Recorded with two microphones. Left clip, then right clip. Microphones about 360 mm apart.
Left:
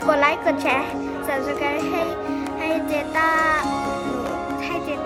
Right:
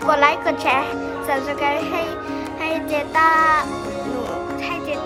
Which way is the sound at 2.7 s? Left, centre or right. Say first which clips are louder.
Right 1 dB; centre.